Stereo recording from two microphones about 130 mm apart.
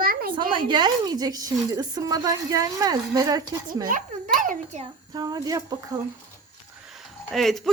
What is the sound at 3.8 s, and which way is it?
A child's voice, 90° right.